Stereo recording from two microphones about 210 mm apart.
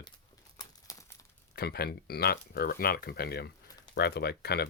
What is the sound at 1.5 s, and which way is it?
Speech, 50° left (ahead or behind).